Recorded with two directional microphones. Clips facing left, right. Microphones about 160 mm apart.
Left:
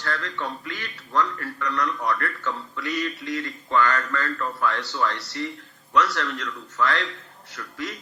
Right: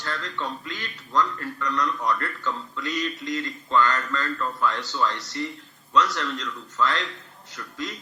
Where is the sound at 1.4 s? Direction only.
20° right (ahead or behind).